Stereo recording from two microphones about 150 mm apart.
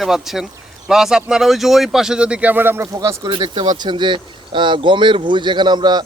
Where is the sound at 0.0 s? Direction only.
Centre (ahead or behind).